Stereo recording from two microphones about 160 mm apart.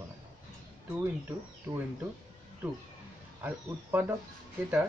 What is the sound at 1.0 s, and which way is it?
Speech, 15° right (ahead or behind).